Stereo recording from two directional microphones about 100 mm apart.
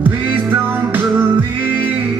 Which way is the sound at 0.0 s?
20° right (ahead or behind).